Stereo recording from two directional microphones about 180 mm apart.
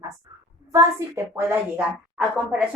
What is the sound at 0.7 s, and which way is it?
A woman's voice, 15° right (ahead or behind).